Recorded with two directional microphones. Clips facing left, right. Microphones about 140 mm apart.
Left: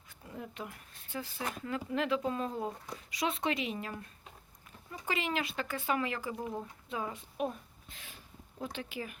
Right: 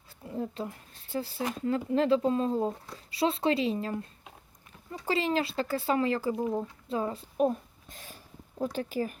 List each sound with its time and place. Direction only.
0.3 s speech: 30° right (ahead or behind)